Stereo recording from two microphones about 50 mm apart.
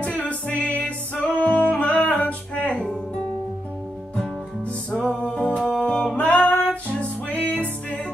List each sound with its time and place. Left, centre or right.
0.0 s music: left
4.9 s music: centre
5.2 s music: left
5.7 s music: centre
6.1 s music: left